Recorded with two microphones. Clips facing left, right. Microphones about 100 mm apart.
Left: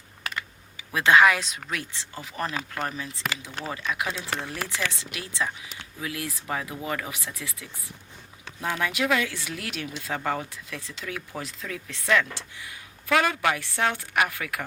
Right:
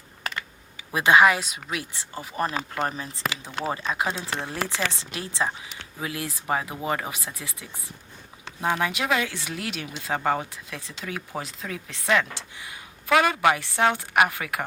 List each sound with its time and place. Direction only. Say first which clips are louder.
0.9 s speech: right 1 dB; 15° right (ahead or behind)
2.1 s speech: right 4 dB; 30° right (ahead or behind)
8.8 s speech: even; 25° right (ahead or behind)